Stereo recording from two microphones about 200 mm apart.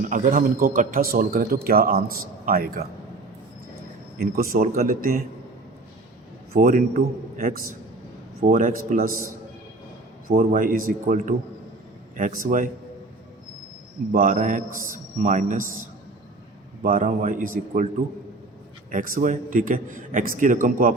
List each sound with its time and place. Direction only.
0.1 s a man's voice: 45° right (ahead or behind)
4.2 s a man's voice: 45° right (ahead or behind)
6.5 s a man's voice: 45° right (ahead or behind)
14.1 s a man's voice: 40° right (ahead or behind)
16.8 s a man's voice: 40° right (ahead or behind)
18.9 s a man's voice: 45° right (ahead or behind)